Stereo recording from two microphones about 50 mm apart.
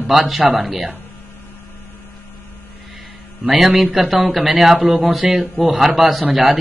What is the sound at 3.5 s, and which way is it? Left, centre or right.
Speech, centre.